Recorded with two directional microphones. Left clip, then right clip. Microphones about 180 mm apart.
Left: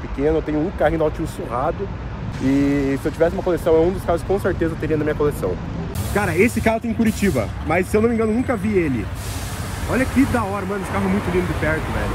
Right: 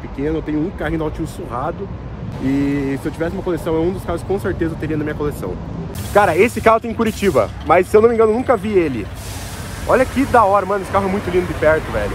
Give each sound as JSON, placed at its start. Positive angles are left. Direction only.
{"t": 0.2, "sound": "speech", "side_deg": 0}
{"t": 9.8, "sound": "speech", "side_deg": 0}